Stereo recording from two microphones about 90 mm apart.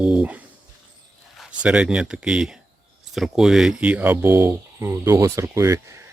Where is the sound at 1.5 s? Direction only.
10° right (ahead or behind).